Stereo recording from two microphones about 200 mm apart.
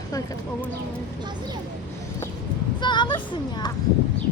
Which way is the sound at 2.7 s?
20° left (ahead or behind).